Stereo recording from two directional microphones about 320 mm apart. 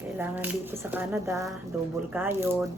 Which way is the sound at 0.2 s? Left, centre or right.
Centre.